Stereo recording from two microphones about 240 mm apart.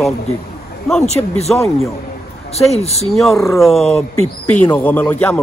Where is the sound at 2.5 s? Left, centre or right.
Left.